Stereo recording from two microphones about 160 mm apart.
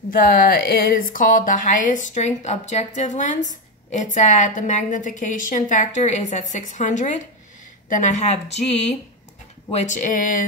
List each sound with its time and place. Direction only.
0.1 s a woman's voice: 65° left (ahead or behind); by 8.4 s 45° left (ahead or behind)
9.7 s a woman's voice: 50° left (ahead or behind)